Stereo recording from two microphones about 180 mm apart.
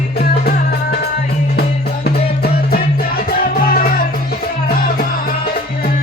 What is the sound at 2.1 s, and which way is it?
Music, 55° left (ahead or behind).